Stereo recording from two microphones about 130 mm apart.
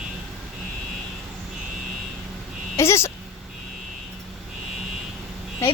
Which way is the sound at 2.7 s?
20° left (ahead or behind).